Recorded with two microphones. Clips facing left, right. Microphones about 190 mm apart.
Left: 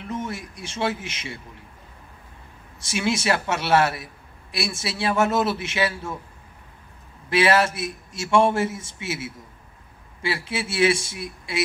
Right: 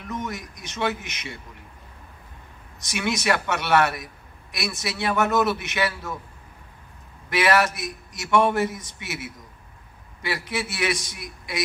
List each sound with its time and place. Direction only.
0.1 s a man's voice: 30° left (ahead or behind)
2.8 s a man's voice: 25° left (ahead or behind)
7.2 s a man's voice: 25° left (ahead or behind)